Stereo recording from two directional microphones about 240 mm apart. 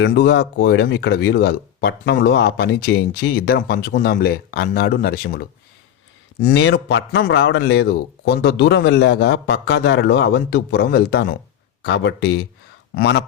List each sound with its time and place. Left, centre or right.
0.0 s speech: left